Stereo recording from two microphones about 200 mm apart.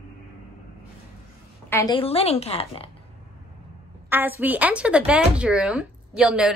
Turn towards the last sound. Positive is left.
turn(degrees=-5)  # may be behind; listen again after turning